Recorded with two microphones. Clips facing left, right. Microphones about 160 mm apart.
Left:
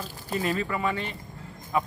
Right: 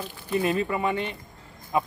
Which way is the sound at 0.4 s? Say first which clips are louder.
Right 3 dB; 20° right (ahead or behind).